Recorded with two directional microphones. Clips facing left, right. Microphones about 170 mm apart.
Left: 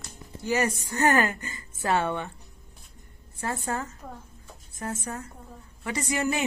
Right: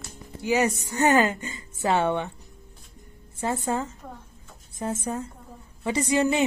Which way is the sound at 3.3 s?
20° right (ahead or behind).